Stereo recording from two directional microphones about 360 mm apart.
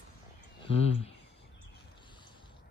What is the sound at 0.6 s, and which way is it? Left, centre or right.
Speech, centre.